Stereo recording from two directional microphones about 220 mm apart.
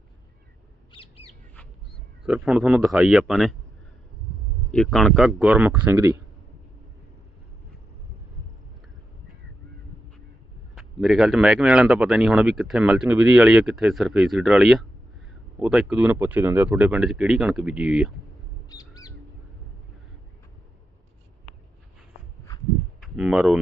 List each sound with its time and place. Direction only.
2.2 s speech: 5° right (ahead or behind)
4.7 s speech: centre (ahead or behind)
10.8 s speech: centre (ahead or behind)
18.7 s bird: 15° left (ahead or behind)
23.0 s speech: centre (ahead or behind)